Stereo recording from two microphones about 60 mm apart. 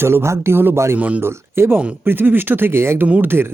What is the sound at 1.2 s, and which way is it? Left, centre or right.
Speech, right.